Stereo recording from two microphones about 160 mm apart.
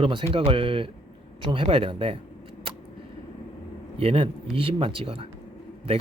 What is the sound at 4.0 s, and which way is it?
Speech, 35° right (ahead or behind).